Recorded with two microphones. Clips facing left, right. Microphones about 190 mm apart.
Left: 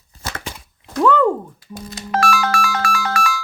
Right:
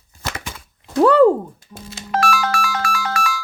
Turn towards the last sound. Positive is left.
turn(degrees=55)  # may be behind; listen again after turning